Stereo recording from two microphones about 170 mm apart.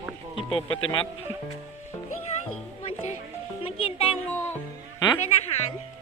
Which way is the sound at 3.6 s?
35° left (ahead or behind).